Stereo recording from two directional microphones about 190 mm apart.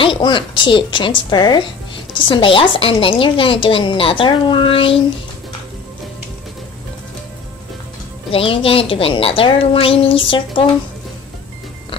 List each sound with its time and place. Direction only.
0.0 s a woman's voice: 25° left (ahead or behind)
8.3 s a woman's voice: 30° left (ahead or behind)